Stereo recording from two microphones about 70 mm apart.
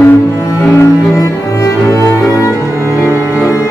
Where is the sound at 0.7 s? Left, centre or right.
Left.